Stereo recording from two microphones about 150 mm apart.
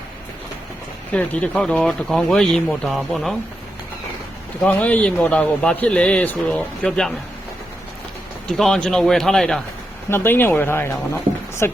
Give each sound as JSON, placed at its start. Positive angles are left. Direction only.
{"t": 1.1, "sound": "speech", "side_deg": 10}
{"t": 4.6, "sound": "a man's voice", "side_deg": 10}
{"t": 8.4, "sound": "speech", "side_deg": 5}
{"t": 10.1, "sound": "a man's voice", "side_deg": 15}